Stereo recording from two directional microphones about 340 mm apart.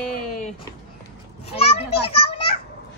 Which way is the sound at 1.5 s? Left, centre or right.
Centre.